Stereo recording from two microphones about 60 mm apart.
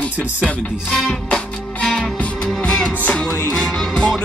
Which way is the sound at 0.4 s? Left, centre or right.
Centre.